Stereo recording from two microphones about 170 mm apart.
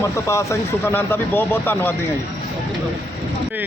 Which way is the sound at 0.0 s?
15° left (ahead or behind).